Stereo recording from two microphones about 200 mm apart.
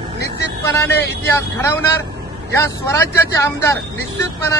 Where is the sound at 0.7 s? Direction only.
10° left (ahead or behind).